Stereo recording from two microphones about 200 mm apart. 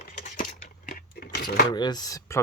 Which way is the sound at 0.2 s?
40° left (ahead or behind).